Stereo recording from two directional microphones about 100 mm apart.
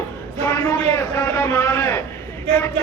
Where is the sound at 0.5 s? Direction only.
25° left (ahead or behind).